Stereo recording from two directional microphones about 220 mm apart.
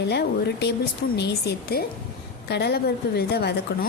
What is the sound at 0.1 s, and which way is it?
Speech, 50° left (ahead or behind).